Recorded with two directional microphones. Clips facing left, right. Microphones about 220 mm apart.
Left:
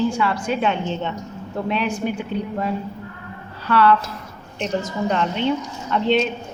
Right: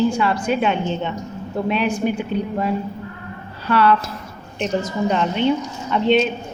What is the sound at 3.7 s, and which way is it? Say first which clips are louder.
A woman's voice: even; 15° right (ahead or behind).